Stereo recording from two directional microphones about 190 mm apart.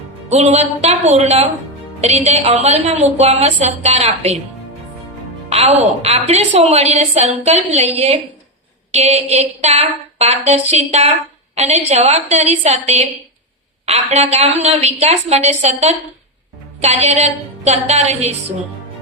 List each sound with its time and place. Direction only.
0.3 s a woman's voice: 35° right (ahead or behind)
5.5 s music: 30° right (ahead or behind)
6.0 s a woman's voice: 35° right (ahead or behind)